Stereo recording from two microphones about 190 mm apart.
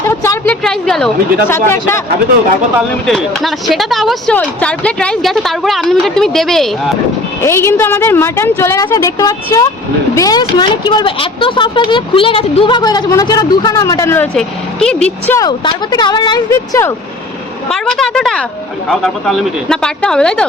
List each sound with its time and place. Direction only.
0.1 s a sound: 15° left (ahead or behind)
0.6 s speech: centre (ahead or behind)
1.5 s a woman's voice: 15° left (ahead or behind)
3.1 s speech: centre (ahead or behind)
7.4 s a woman's voice: 15° left (ahead or behind)
15.4 s speech: 20° left (ahead or behind)
17.7 s speech: centre (ahead or behind)